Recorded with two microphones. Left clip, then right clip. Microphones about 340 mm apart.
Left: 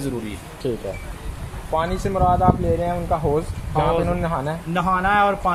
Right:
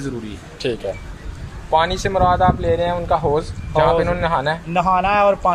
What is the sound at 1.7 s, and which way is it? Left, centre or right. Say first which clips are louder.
Speech: right 5 dB; right.